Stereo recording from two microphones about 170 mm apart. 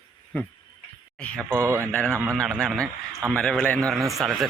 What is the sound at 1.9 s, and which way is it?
Speech, 10° left (ahead or behind).